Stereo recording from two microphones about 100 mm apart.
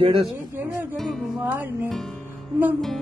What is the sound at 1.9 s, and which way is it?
Speech, 5° left (ahead or behind).